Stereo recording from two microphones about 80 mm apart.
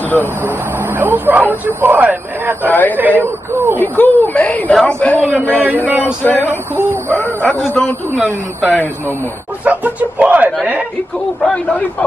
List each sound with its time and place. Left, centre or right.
0.9 s a man's voice: right
3.8 s speech: left
9.7 s a man's voice: centre
11.4 s speech: centre